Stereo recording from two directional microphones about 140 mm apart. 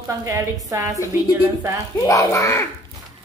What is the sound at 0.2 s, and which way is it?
Speech, 25° right (ahead or behind).